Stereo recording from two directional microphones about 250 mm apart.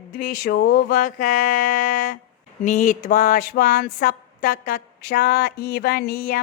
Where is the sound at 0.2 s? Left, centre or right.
Left.